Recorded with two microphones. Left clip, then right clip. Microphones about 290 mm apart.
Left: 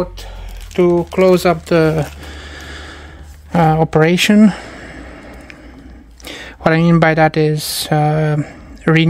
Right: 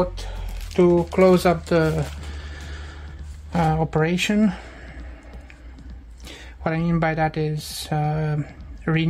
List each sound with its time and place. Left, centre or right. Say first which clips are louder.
0.7 s speech: left 4 dB; left
6.2 s speech: left 12 dB; left